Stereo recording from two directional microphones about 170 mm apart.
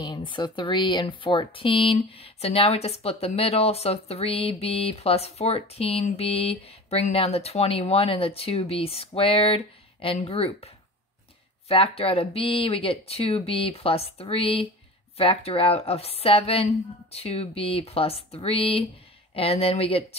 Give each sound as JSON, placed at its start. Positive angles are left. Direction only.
{"t": 0.0, "sound": "speech", "side_deg": 25}
{"t": 11.7, "sound": "speech", "side_deg": 35}